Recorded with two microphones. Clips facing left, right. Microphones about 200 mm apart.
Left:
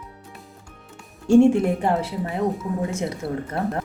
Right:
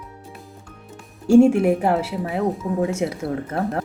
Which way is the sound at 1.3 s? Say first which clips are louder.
Right 2 dB; 10° right (ahead or behind).